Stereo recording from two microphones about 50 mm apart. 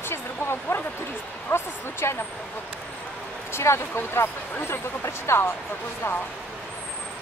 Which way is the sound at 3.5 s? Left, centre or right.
Left.